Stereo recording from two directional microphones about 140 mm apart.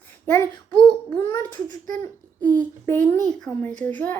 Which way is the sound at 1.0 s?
20° left (ahead or behind).